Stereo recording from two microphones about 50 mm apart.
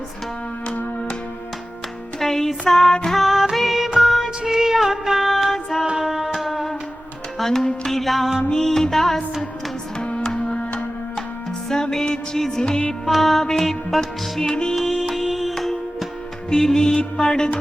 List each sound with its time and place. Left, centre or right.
2.1 s music: centre
3.2 s music: centre
4.4 s female singing: centre
5.8 s music: centre
6.5 s music: centre
10.0 s music: centre
11.7 s music: centre
12.9 s music: centre
14.4 s music: centre
14.8 s music: centre
15.5 s music: centre